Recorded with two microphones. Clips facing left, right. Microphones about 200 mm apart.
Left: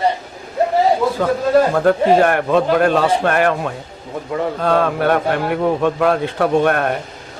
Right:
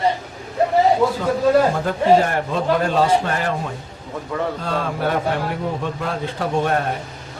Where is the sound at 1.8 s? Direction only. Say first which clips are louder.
Left 3 dB; 65° left (ahead or behind).